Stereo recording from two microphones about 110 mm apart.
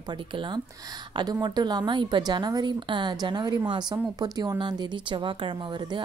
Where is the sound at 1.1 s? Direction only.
40° right (ahead or behind).